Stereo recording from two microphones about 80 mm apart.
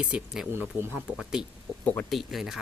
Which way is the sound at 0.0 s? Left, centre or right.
Centre.